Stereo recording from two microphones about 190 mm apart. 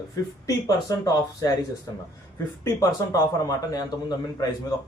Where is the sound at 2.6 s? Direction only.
15° left (ahead or behind).